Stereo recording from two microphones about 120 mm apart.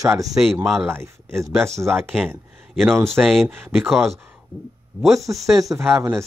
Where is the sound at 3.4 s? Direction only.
15° right (ahead or behind).